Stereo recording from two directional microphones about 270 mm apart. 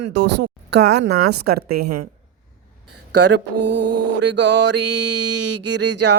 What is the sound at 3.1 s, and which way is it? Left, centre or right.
Music, right.